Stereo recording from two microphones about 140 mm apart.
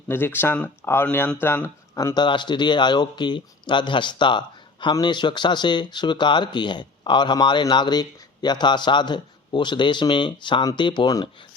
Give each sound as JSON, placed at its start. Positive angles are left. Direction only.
{"t": 0.1, "sound": "speech", "side_deg": 15}
{"t": 2.1, "sound": "speech", "side_deg": 35}